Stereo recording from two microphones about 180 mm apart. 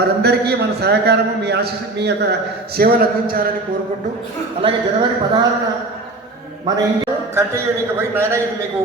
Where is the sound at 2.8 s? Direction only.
55° right (ahead or behind).